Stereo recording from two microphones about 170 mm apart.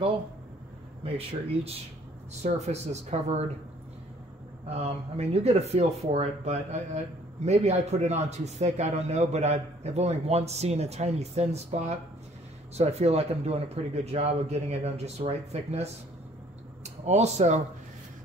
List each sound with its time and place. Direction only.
1.0 s speech: 35° right (ahead or behind)
4.6 s speech: 40° right (ahead or behind)